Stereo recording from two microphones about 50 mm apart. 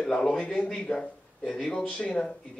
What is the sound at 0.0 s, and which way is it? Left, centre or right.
Speech, centre.